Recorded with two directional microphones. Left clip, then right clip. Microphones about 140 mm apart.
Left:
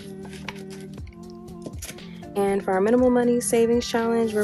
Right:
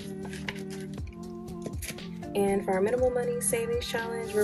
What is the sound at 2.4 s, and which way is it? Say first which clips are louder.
Speech: left 6 dB; 50° left (ahead or behind).